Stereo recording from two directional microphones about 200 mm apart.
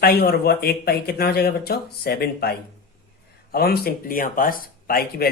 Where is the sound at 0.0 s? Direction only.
50° left (ahead or behind).